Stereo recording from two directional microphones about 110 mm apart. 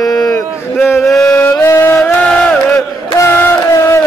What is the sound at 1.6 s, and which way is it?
Music, 20° left (ahead or behind).